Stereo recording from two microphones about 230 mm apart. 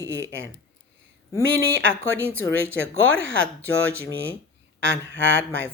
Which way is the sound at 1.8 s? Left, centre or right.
Right.